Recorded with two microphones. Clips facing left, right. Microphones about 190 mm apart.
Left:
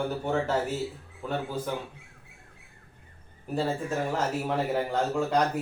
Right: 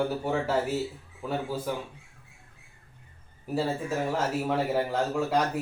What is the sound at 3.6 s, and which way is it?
A man's voice, 5° right (ahead or behind).